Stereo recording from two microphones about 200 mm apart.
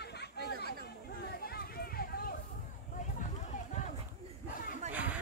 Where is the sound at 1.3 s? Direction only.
50° left (ahead or behind).